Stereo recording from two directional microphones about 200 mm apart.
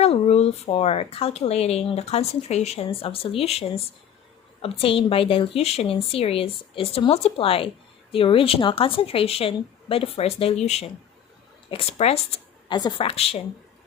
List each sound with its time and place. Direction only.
0.0 s a woman's voice: 30° left (ahead or behind)